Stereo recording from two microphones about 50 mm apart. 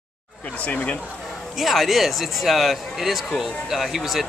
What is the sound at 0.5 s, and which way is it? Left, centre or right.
Speech, left.